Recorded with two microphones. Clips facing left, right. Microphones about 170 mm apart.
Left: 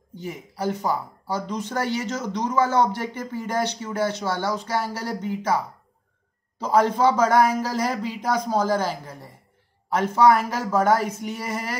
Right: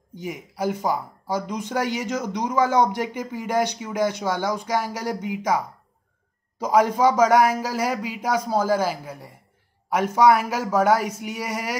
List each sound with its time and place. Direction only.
0.1 s speech: 10° right (ahead or behind)
6.6 s speech: 10° right (ahead or behind)